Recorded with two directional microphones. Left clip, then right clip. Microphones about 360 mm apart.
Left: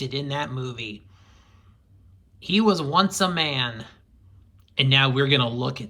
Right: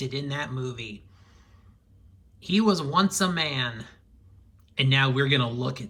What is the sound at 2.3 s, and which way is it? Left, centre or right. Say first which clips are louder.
Speech: left 3 dB; centre.